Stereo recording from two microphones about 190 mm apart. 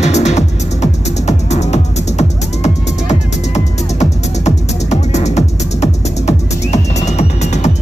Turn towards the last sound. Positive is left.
turn(degrees=35)  # may be behind; listen again after turning